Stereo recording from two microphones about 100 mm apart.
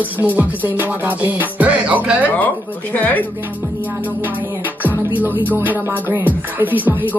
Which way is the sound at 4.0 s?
15° right (ahead or behind).